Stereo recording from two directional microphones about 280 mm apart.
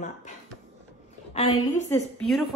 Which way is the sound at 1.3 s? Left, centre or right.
Centre.